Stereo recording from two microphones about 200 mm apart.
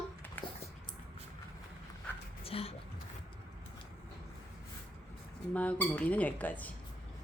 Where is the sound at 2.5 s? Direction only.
30° left (ahead or behind).